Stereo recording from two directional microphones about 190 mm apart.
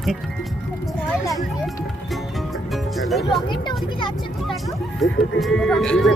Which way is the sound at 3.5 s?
25° left (ahead or behind).